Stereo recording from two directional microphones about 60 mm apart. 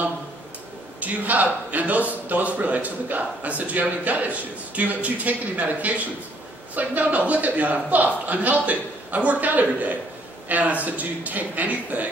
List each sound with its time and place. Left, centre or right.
1.0 s a man's voice: right